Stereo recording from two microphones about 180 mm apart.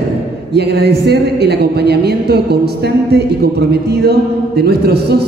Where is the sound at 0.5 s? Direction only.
65° right (ahead or behind).